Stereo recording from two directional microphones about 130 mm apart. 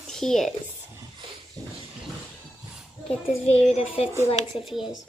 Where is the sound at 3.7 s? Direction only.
50° left (ahead or behind).